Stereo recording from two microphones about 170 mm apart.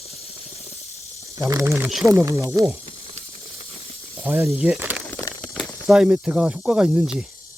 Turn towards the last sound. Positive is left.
turn(degrees=-5)  # may be behind; listen again after turning